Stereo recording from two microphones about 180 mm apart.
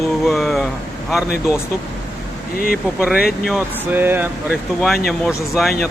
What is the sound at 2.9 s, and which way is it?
Speech, 5° right (ahead or behind).